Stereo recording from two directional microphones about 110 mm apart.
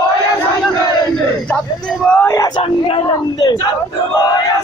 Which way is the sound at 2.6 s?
65° left (ahead or behind).